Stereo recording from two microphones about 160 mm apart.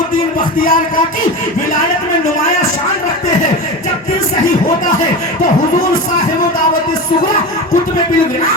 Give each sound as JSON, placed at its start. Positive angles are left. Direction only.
{"t": 0.3, "sound": "speech", "side_deg": 60}